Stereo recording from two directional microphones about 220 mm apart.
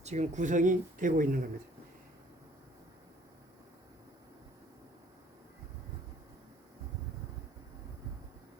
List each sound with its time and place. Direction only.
0.0 s speech: 30° right (ahead or behind)